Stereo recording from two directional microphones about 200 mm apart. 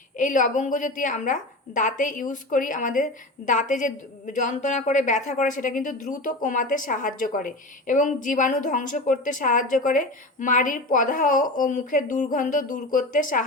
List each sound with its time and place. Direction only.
0.2 s a woman's voice: 40° left (ahead or behind)